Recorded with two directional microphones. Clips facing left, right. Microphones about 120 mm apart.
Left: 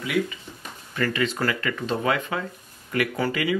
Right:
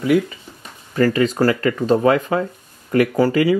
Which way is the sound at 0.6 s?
35° right (ahead or behind).